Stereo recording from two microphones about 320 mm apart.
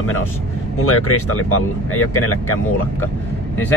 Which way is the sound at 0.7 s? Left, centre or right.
Left.